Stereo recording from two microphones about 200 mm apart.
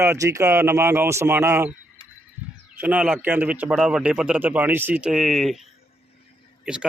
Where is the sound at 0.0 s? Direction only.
15° right (ahead or behind).